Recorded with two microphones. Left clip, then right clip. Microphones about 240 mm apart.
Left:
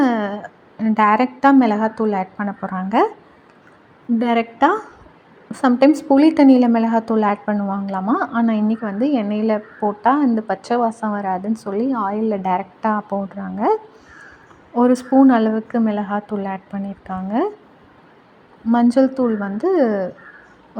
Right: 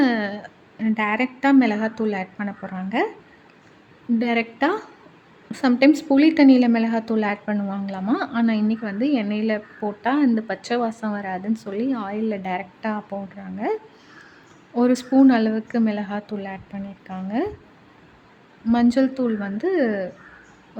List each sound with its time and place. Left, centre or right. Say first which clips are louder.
0.0 s a woman's voice: left 3 dB; centre
4.2 s a woman's voice: left 6 dB; centre
14.8 s a woman's voice: left 4 dB; centre
18.7 s a woman's voice: left 4 dB; centre